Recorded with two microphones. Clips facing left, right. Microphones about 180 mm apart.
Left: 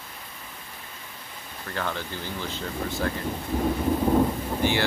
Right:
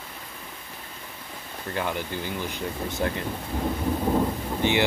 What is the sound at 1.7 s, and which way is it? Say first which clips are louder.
Speech: right 2 dB; 15° right (ahead or behind).